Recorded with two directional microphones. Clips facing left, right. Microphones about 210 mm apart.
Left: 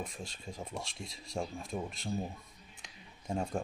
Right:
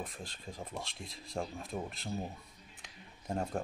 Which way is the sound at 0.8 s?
55° right (ahead or behind).